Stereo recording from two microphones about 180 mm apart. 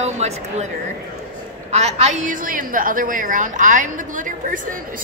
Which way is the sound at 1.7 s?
35° right (ahead or behind).